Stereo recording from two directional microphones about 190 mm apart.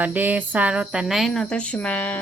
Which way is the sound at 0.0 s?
10° right (ahead or behind).